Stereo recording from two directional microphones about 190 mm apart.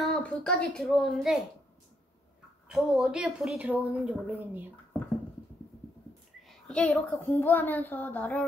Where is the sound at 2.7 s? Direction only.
5° right (ahead or behind).